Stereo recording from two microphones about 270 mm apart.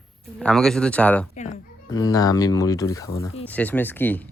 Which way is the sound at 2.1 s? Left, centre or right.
Centre.